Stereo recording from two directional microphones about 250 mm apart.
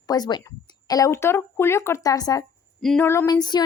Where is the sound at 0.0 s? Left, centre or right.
Centre.